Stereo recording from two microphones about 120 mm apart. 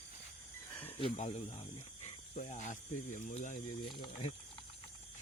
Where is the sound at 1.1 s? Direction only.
65° left (ahead or behind); by 3.6 s 90° left.